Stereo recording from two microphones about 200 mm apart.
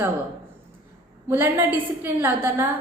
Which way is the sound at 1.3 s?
10° right (ahead or behind).